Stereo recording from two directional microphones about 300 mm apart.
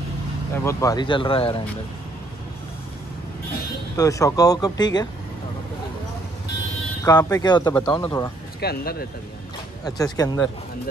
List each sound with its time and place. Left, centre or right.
0.7 s speech: centre
3.9 s speech: centre
7.1 s speech: centre
8.5 s speech: left
9.8 s speech: centre